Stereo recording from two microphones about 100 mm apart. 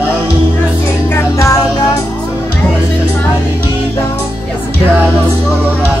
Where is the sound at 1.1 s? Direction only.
30° left (ahead or behind).